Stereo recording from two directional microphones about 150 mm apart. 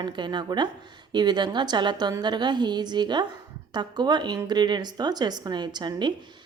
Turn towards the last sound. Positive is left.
turn(degrees=-30)  # may be behind; listen again after turning